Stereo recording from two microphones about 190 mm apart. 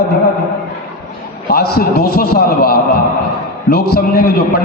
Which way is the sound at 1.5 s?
55° left (ahead or behind).